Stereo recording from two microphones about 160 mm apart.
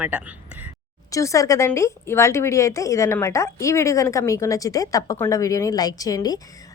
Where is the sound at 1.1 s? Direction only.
20° left (ahead or behind).